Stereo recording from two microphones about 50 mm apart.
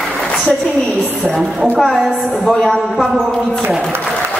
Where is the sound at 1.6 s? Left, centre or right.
Centre.